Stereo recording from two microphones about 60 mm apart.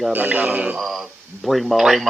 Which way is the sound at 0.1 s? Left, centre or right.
Right.